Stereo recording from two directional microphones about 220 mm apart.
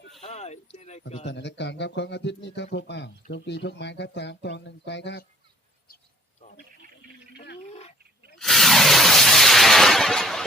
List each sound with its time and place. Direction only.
0.2 s speech: 30° left (ahead or behind)
1.2 s speech: 55° left (ahead or behind)
7.3 s a sound: 50° left (ahead or behind)
7.6 s dog: 30° left (ahead or behind)
8.4 s shatter: centre (ahead or behind)